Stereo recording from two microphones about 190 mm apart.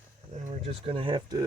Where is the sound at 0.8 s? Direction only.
30° right (ahead or behind).